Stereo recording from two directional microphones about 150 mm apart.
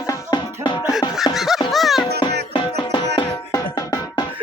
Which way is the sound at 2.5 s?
30° left (ahead or behind).